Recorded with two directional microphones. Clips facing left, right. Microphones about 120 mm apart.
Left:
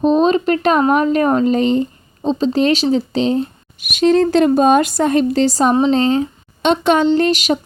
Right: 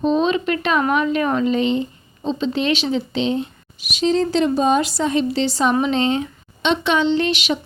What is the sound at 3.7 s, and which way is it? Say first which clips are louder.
A woman's voice: left 6 dB; 55° left (ahead or behind).